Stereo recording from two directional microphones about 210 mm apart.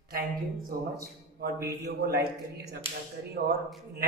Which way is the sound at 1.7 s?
50° right (ahead or behind).